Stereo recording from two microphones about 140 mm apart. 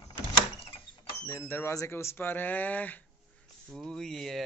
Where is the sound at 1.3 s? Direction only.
20° left (ahead or behind); by 4.4 s centre (ahead or behind).